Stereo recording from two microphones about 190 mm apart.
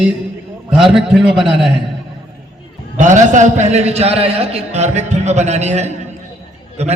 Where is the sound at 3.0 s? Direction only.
40° right (ahead or behind).